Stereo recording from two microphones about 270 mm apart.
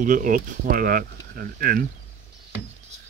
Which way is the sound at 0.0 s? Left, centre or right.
Right.